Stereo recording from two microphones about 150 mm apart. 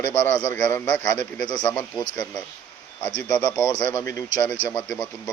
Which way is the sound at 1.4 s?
30° left (ahead or behind).